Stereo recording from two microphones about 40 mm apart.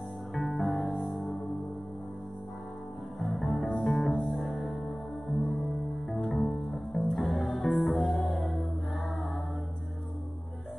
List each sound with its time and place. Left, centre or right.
0.3 s music: centre
3.2 s music: centre